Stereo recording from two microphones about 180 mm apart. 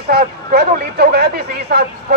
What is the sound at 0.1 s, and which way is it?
Speech, 60° right (ahead or behind).